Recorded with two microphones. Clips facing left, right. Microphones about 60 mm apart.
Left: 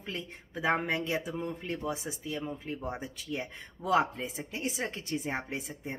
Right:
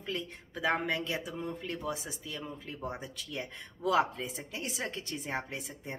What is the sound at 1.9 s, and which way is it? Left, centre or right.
Speech, left.